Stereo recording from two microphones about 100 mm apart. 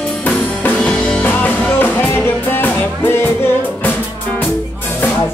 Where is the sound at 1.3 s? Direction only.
20° left (ahead or behind).